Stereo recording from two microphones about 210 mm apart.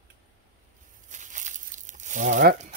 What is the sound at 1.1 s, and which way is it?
Crumpling, 35° right (ahead or behind).